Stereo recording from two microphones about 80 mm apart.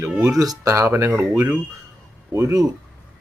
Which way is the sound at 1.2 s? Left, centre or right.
Right.